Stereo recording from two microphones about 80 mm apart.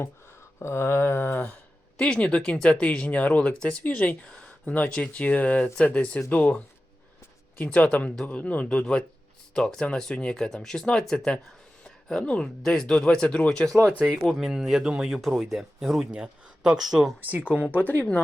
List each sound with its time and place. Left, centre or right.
0.6 s a sound: left
2.0 s speech: centre
7.6 s speech: centre
11.8 s a sound: centre
12.6 s speech: centre
17.5 s speech: centre
17.7 s speech: left